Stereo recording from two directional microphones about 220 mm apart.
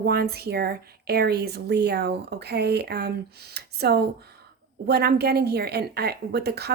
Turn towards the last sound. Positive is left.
turn(degrees=-45)  # may be behind; listen again after turning